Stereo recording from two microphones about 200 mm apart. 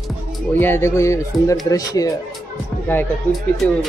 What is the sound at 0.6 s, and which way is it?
Speech, 10° left (ahead or behind).